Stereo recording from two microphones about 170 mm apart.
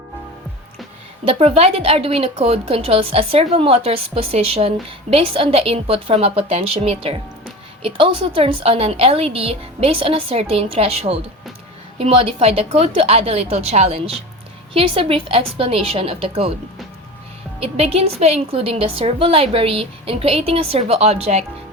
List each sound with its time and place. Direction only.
1.3 s a woman's voice: 35° right (ahead or behind)
17.6 s a woman's voice: 35° right (ahead or behind)